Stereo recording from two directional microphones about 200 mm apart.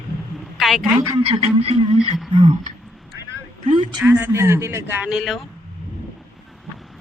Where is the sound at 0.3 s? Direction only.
Centre (ahead or behind).